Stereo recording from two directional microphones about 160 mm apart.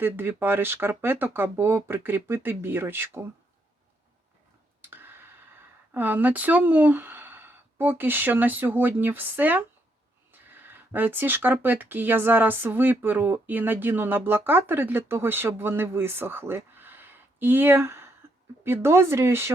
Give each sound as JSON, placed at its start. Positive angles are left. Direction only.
{"t": 0.0, "sound": "speech", "side_deg": -15}
{"t": 4.8, "sound": "tick", "side_deg": -15}
{"t": 5.9, "sound": "speech", "side_deg": -10}